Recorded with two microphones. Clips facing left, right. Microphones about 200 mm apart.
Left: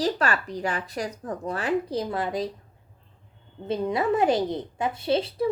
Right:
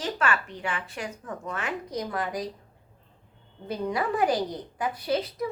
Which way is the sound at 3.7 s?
25° left (ahead or behind).